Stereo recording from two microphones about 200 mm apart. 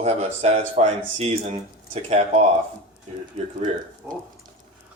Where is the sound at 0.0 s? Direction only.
30° right (ahead or behind).